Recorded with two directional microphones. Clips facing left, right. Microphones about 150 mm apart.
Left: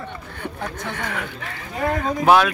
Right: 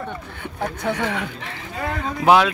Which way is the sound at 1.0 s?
25° right (ahead or behind).